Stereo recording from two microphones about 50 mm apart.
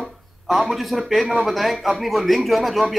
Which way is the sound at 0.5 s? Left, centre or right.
Centre.